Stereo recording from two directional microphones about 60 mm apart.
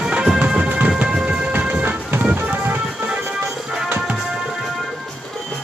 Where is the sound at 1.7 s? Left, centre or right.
Right.